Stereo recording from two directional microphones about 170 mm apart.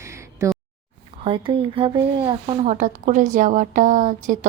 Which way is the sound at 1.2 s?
30° right (ahead or behind).